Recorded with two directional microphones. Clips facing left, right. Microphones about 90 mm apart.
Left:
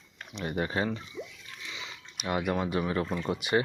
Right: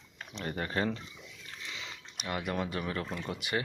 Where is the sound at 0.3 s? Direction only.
10° left (ahead or behind).